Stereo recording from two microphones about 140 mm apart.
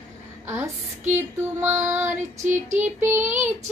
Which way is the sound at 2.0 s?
60° right (ahead or behind).